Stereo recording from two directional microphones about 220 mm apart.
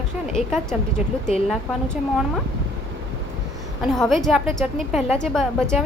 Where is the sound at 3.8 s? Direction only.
Centre (ahead or behind).